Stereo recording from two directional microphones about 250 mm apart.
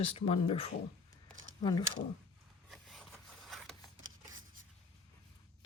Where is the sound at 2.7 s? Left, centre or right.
Centre.